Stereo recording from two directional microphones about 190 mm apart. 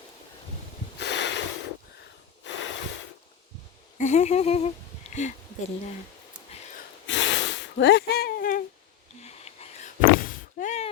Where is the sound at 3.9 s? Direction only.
40° left (ahead or behind).